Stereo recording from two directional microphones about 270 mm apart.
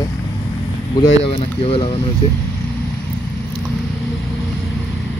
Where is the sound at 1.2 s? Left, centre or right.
Left.